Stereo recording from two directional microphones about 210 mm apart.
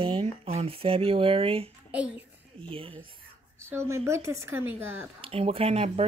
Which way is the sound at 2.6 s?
25° right (ahead or behind).